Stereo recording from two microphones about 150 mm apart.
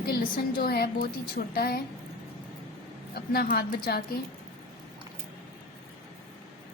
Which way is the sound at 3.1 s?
90° left.